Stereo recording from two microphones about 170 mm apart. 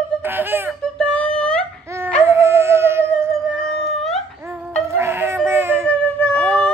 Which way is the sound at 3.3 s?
Centre (ahead or behind).